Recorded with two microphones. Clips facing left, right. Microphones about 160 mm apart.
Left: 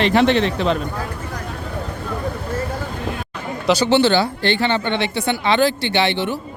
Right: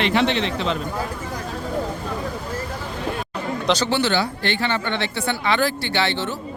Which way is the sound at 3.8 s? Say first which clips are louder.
Left 6 dB; 25° left (ahead or behind).